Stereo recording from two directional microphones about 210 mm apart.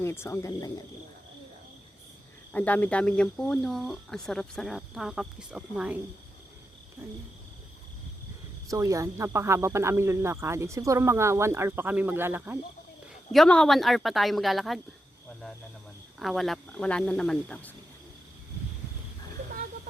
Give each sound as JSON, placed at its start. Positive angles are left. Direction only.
{"t": 0.0, "sound": "speech", "side_deg": 10}
{"t": 2.5, "sound": "speech", "side_deg": 5}
{"t": 8.7, "sound": "speech", "side_deg": -15}
{"t": 13.3, "sound": "speech", "side_deg": 0}
{"t": 16.1, "sound": "speech", "side_deg": 0}